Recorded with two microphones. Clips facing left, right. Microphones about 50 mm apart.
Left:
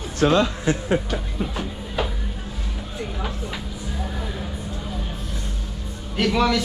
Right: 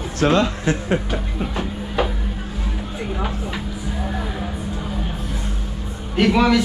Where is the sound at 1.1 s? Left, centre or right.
Centre.